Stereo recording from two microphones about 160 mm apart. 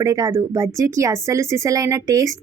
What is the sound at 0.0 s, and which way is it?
Speech, 20° right (ahead or behind).